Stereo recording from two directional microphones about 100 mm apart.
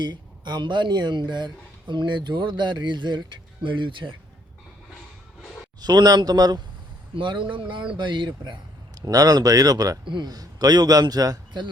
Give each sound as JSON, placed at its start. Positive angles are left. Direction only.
{"t": 0.0, "sound": "speech", "side_deg": -50}
{"t": 5.4, "sound": "a sound", "side_deg": 10}
{"t": 5.8, "sound": "a man's voice", "side_deg": -40}
{"t": 7.2, "sound": "speech", "side_deg": -55}
{"t": 9.0, "sound": "a man's voice", "side_deg": -35}
{"t": 10.0, "sound": "a man's voice", "side_deg": -50}